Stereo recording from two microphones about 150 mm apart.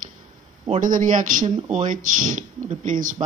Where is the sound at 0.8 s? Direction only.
60° right (ahead or behind).